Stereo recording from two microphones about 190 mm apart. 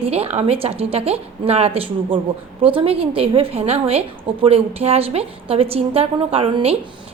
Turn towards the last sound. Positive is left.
turn(degrees=-30)  # may be behind; listen again after turning